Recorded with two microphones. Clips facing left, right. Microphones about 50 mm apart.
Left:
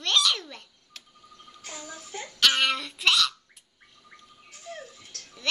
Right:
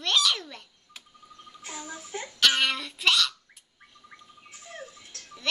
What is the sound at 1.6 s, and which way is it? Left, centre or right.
Child singing, right.